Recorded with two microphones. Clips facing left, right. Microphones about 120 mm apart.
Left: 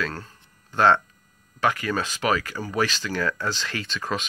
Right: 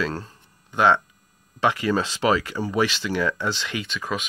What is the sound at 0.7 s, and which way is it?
Speech, 10° right (ahead or behind).